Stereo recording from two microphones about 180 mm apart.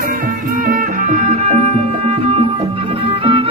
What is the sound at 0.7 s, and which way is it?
Music, 40° right (ahead or behind).